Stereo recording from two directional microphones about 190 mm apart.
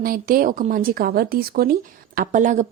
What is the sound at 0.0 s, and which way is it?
Speech, 50° right (ahead or behind).